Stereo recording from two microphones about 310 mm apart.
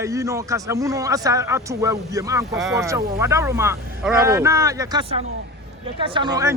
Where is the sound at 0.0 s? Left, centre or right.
Centre.